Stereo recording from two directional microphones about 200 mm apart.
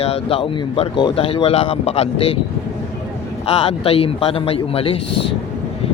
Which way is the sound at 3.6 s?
30° left (ahead or behind).